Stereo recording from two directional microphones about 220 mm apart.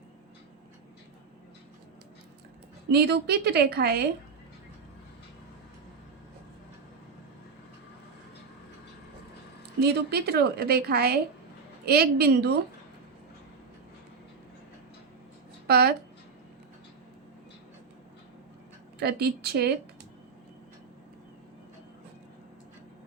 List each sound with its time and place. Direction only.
2.9 s a woman's voice: 45° right (ahead or behind)
9.8 s a woman's voice: 45° right (ahead or behind)
15.6 s speech: 45° right (ahead or behind)
18.9 s a woman's voice: 45° right (ahead or behind)